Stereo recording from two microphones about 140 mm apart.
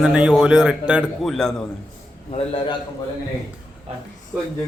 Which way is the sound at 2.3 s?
40° left (ahead or behind).